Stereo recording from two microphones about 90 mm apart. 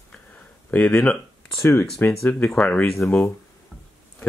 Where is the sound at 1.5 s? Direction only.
25° left (ahead or behind).